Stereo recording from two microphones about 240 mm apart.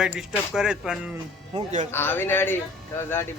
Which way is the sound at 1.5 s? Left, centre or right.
Right.